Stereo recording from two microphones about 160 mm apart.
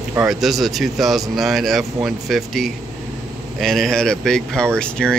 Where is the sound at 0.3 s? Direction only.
Centre (ahead or behind).